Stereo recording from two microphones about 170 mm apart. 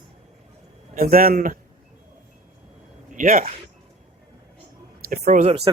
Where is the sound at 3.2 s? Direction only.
55° right (ahead or behind).